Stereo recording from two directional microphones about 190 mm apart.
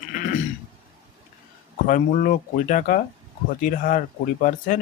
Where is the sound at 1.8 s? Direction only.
45° left (ahead or behind).